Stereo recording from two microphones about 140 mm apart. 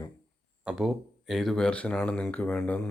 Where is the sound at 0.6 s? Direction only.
5° right (ahead or behind).